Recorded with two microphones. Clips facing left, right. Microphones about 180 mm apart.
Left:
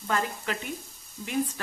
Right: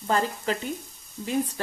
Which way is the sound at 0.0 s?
30° right (ahead or behind).